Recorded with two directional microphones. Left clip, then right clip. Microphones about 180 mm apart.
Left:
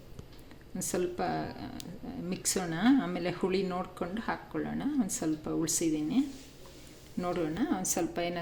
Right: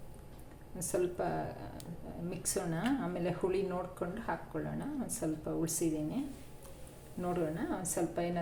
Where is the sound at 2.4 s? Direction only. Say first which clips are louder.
Left 5 dB; 40° left (ahead or behind).